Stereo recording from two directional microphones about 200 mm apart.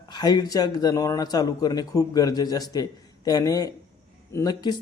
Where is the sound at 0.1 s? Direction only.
20° left (ahead or behind).